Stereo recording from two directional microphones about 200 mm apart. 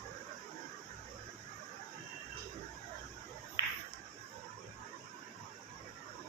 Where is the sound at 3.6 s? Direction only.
20° right (ahead or behind).